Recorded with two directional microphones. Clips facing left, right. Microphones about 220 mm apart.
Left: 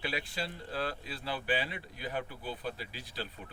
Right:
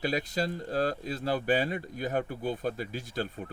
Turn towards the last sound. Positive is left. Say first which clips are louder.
# right 8 dB
turn(degrees=-45)  # may be behind; listen again after turning